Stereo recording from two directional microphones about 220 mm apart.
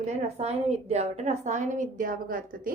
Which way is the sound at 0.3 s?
30° right (ahead or behind).